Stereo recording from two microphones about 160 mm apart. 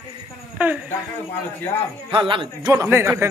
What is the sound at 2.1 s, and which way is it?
Speech, 30° right (ahead or behind).